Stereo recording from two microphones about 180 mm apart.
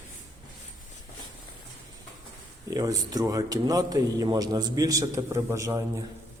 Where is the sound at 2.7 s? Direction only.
20° right (ahead or behind).